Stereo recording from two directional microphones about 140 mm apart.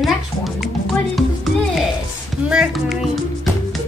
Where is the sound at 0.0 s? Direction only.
Centre (ahead or behind).